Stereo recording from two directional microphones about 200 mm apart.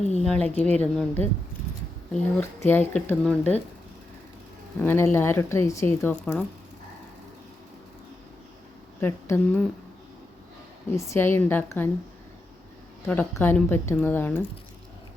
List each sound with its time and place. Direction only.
0.0 s a sound: 35° left (ahead or behind)
0.3 s speech: 5° left (ahead or behind)
2.4 s speech: 10° left (ahead or behind)
4.8 s speech: 10° left (ahead or behind)
9.0 s speech: 10° left (ahead or behind)
10.9 s speech: 15° left (ahead or behind)
13.1 s speech: 10° left (ahead or behind)